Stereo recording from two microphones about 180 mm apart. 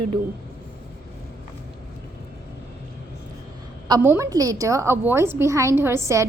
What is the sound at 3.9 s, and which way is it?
A woman's voice, 15° right (ahead or behind).